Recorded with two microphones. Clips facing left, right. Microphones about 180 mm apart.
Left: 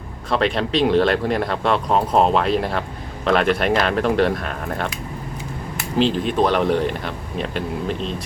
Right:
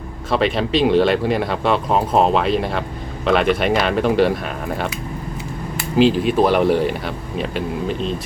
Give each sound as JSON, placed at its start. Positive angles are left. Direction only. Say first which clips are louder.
{"t": 0.3, "sound": "speech", "louder": "right 2 dB", "side_deg": -5}
{"t": 6.0, "sound": "speech", "louder": "right 4 dB", "side_deg": -5}